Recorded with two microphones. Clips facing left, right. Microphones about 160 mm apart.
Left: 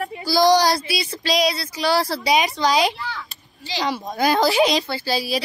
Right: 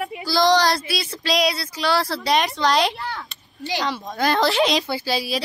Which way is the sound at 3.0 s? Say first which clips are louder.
Right 1 dB; 60° right (ahead or behind).